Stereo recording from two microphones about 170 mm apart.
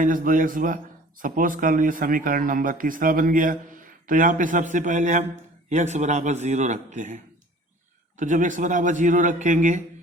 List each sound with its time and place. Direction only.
0.0 s speech: 50° right (ahead or behind)
8.2 s speech: 50° right (ahead or behind)